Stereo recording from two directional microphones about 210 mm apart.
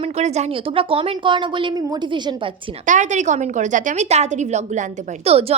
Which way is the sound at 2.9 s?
35° right (ahead or behind).